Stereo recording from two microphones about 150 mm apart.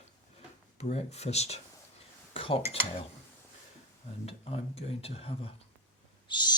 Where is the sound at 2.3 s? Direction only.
40° left (ahead or behind).